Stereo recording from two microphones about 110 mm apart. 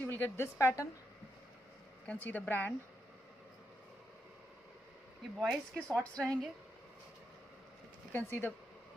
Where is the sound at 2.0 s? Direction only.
15° left (ahead or behind).